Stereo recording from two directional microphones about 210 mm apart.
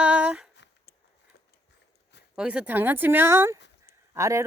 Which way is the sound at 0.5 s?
55° left (ahead or behind).